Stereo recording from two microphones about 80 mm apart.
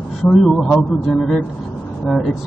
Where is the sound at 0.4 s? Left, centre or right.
Centre.